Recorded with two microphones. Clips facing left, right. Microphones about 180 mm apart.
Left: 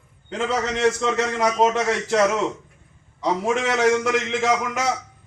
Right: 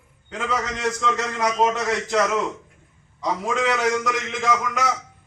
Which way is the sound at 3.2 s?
25° left (ahead or behind).